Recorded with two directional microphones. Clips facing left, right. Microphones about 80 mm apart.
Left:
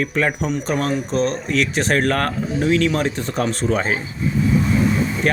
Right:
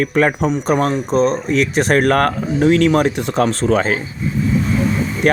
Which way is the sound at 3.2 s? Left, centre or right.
Right.